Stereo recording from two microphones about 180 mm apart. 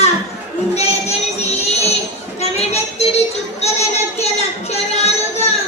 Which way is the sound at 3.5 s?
35° left (ahead or behind).